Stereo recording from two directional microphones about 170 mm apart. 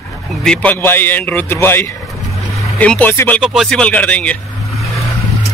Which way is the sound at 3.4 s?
Centre (ahead or behind).